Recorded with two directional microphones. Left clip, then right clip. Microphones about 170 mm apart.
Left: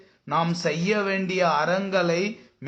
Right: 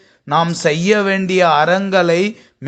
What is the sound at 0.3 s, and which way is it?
A man's voice, 40° right (ahead or behind).